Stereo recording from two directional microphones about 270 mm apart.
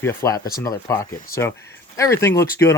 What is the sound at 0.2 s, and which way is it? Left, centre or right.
Speech, centre.